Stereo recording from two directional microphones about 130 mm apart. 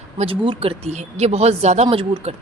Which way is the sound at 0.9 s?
60° right (ahead or behind).